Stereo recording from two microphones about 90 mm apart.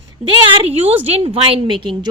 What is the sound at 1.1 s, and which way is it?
Speech, 90° right.